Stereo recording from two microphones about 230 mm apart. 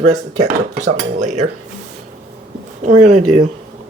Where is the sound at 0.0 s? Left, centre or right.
Right.